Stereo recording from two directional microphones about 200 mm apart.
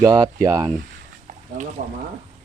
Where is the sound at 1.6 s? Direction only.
40° right (ahead or behind).